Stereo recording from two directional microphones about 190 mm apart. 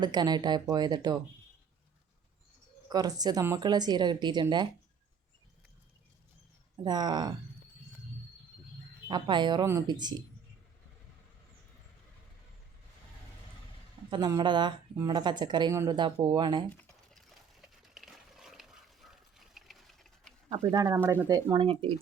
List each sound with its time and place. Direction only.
0.0 s a woman's voice: 20° right (ahead or behind)
2.9 s a woman's voice: 20° right (ahead or behind)
6.8 s a woman's voice: 20° right (ahead or behind)
9.0 s a woman's voice: 25° right (ahead or behind)
14.1 s a woman's voice: 20° right (ahead or behind)
16.8 s a sound: centre (ahead or behind)
20.5 s a woman's voice: 15° right (ahead or behind)